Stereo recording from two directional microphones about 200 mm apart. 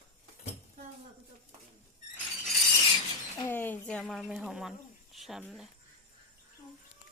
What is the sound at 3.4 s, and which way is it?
Speech, 10° left (ahead or behind).